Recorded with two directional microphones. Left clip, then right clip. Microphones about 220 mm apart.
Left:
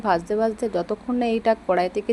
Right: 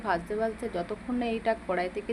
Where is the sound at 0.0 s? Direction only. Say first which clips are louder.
Left 8 dB; 30° left (ahead or behind).